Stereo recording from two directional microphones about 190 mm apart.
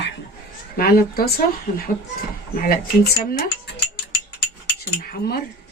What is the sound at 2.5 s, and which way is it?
Speech, 45° left (ahead or behind).